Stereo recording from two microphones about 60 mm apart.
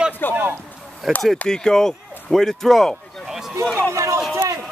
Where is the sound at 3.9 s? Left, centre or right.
Right.